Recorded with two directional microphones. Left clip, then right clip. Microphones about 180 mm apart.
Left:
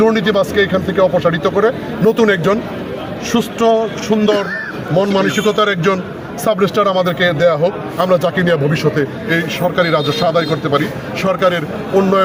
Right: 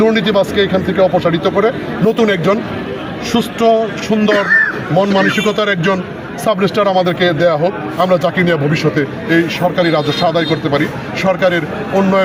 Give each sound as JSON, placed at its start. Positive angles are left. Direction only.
{"t": 0.0, "sound": "speech", "side_deg": 20}